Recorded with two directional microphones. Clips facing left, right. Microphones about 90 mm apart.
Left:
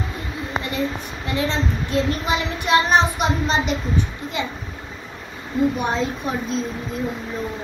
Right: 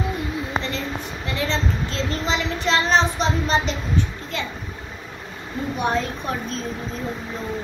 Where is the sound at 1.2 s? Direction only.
20° left (ahead or behind).